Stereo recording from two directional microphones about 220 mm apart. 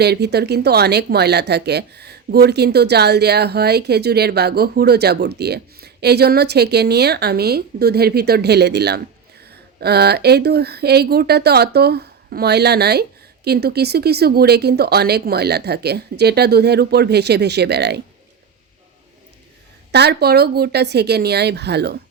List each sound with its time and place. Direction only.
0.0 s speech: 50° right (ahead or behind)
19.9 s speech: 50° right (ahead or behind)